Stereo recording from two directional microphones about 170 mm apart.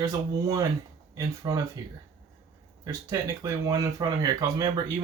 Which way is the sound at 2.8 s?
20° right (ahead or behind).